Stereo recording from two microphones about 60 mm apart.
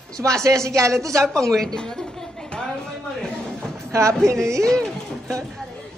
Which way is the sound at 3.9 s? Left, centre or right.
Right.